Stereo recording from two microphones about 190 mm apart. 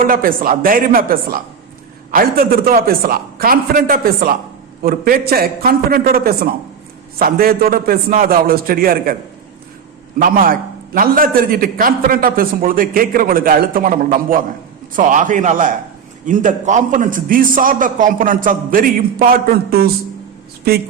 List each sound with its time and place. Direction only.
0.0 s a man's voice: 50° right (ahead or behind)
10.2 s a man's voice: 45° right (ahead or behind)